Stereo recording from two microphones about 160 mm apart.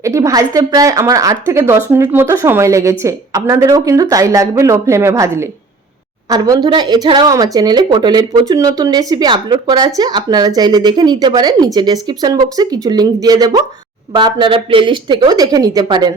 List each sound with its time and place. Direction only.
0.0 s speech: 20° right (ahead or behind)